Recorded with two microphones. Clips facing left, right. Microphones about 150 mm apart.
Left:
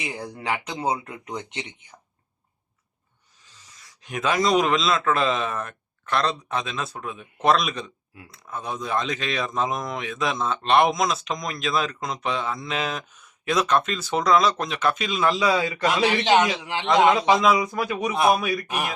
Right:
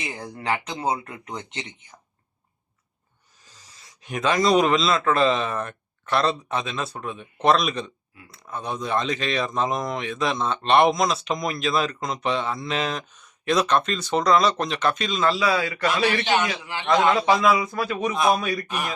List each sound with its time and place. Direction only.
0.0 s speech: 10° left (ahead or behind)
3.4 s a sound: 40° right (ahead or behind)
4.0 s speech: centre (ahead or behind)
15.3 s a man's voice: 20° left (ahead or behind)
16.2 s a man's voice: 90° left
16.8 s speech: 20° left (ahead or behind)